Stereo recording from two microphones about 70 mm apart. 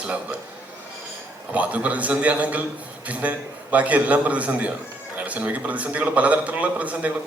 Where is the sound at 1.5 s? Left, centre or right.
Right.